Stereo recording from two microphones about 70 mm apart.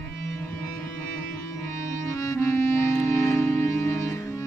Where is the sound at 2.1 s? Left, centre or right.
Left.